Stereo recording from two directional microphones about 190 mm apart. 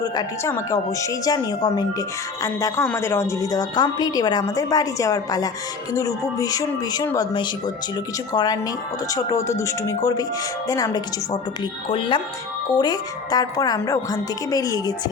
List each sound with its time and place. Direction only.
0.0 s a woman's voice: 15° left (ahead or behind)